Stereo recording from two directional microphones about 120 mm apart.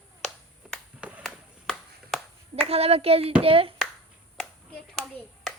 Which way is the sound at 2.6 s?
55° right (ahead or behind).